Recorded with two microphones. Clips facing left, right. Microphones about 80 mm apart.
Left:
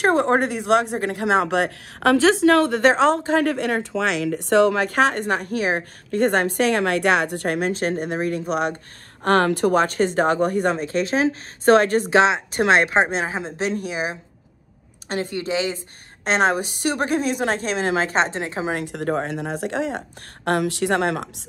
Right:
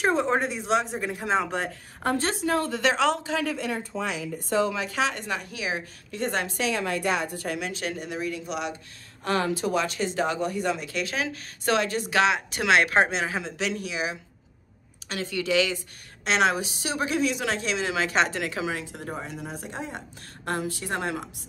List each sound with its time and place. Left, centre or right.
0.0 s speech: left
2.8 s a woman's voice: left
9.2 s a woman's voice: left
12.1 s a woman's voice: left
18.8 s speech: left
20.4 s speech: left